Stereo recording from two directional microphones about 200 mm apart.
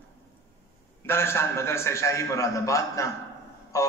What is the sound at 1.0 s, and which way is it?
A man's voice, 10° left (ahead or behind).